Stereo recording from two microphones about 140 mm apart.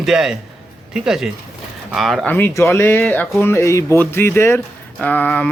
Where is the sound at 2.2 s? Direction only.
15° left (ahead or behind).